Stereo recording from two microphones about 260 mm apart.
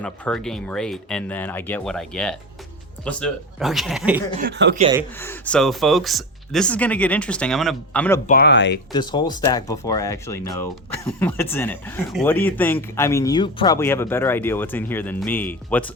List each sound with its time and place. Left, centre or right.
0.0 s speech: centre
4.4 s speech: right
5.2 s speech: centre
8.3 s speech: left
8.9 s speech: centre